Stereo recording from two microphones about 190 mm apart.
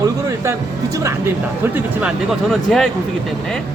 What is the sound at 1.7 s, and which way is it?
Speech, 5° right (ahead or behind).